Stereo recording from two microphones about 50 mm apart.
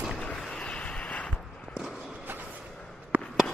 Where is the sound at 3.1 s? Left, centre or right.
Right.